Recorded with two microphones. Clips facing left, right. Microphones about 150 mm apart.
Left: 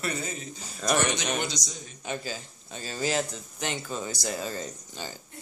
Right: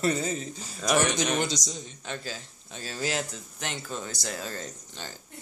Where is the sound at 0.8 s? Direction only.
Centre (ahead or behind).